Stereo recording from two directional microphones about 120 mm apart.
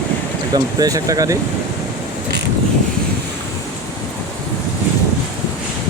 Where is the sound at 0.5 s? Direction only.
30° right (ahead or behind).